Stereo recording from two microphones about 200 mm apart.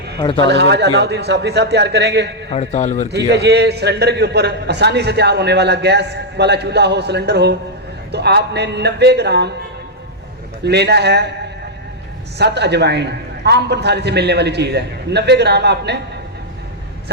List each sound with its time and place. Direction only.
0.2 s a man's voice: 25° left (ahead or behind)
0.4 s a man's voice: 60° right (ahead or behind)
2.5 s a man's voice: 35° left (ahead or behind)
3.1 s a man's voice: 55° right (ahead or behind)
10.6 s a man's voice: 55° right (ahead or behind)
12.4 s a man's voice: 55° right (ahead or behind)